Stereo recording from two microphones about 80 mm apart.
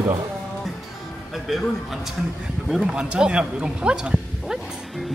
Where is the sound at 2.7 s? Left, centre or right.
Centre.